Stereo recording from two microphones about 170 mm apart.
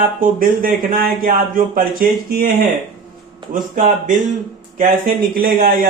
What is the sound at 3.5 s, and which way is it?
A man's voice, 55° right (ahead or behind).